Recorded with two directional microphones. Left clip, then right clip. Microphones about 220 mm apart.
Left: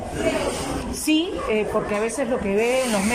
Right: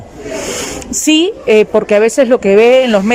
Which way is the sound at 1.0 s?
45° right (ahead or behind).